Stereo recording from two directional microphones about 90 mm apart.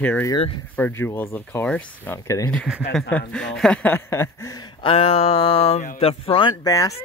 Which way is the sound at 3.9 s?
25° left (ahead or behind).